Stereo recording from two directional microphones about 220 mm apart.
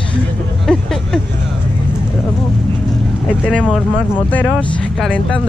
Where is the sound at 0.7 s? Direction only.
5° left (ahead or behind).